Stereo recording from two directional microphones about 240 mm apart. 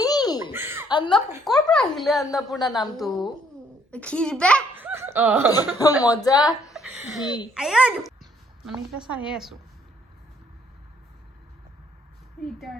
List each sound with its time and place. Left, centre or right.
0.0 s baby laughter: centre
0.5 s a sound: centre
0.9 s a sound: centre
1.5 s a woman's voice: centre
4.8 s dog: centre
5.5 s a woman's voice: centre
6.7 s a child's voice: centre
12.5 s a woman's voice: centre